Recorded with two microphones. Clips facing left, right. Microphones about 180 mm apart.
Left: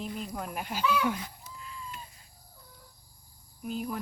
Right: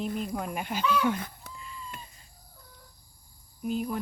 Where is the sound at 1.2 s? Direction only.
55° right (ahead or behind).